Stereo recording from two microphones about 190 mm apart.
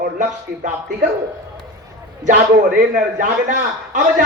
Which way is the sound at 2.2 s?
40° right (ahead or behind).